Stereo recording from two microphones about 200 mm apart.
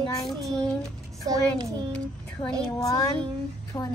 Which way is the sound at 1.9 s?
5° left (ahead or behind).